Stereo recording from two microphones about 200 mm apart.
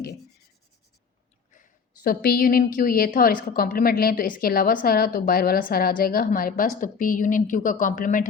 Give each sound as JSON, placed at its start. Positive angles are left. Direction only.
{"t": 2.0, "sound": "a woman's voice", "side_deg": 50}